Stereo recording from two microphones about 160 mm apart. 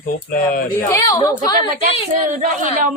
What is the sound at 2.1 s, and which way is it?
Speech, 55° right (ahead or behind).